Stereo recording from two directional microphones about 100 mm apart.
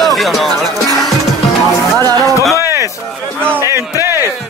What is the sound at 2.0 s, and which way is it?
Music, 35° right (ahead or behind).